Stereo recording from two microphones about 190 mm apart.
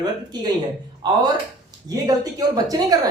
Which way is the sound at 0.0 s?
20° right (ahead or behind).